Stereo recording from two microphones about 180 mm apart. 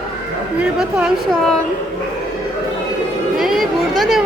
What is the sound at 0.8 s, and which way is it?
Speech, 5° right (ahead or behind).